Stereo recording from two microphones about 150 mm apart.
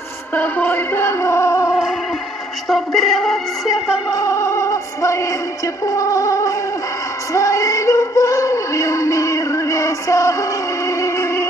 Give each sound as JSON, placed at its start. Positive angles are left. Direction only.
{"t": 0.3, "sound": "music", "side_deg": 10}
{"t": 2.7, "sound": "speech", "side_deg": 0}
{"t": 4.1, "sound": "music", "side_deg": 20}
{"t": 7.3, "sound": "a sound", "side_deg": 20}
{"t": 10.9, "sound": "music", "side_deg": 20}